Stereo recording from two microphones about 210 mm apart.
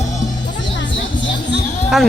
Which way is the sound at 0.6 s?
60° left (ahead or behind).